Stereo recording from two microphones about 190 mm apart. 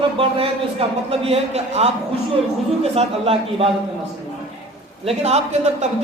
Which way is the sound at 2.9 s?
30° right (ahead or behind).